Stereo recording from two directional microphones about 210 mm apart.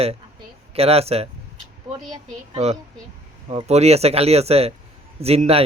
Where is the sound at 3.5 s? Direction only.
30° right (ahead or behind).